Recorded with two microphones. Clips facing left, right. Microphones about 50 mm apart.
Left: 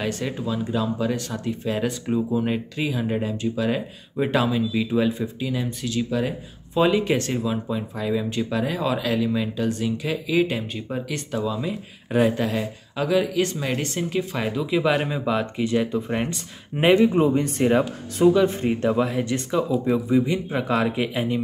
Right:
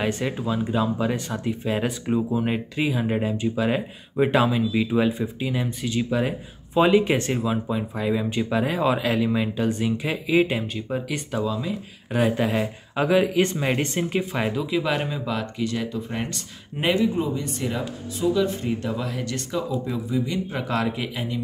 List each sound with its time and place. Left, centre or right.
0.0 s speech: centre
10.9 s speech: centre
12.4 s speech: centre
14.5 s speech: centre; by 17.1 s left
17.1 s speech: left
18.3 s speech: left
20.5 s speech: centre
21.1 s speech: left